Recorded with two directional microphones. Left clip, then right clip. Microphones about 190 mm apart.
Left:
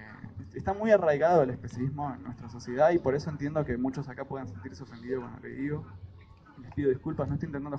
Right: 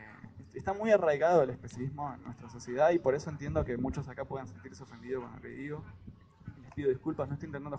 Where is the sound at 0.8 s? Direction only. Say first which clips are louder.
Left 3 dB; 20° right (ahead or behind).